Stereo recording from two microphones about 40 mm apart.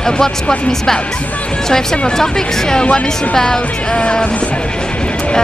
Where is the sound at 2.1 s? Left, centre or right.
Centre.